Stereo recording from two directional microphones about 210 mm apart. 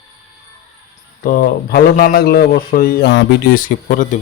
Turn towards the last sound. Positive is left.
turn(degrees=40)  # may be behind; listen again after turning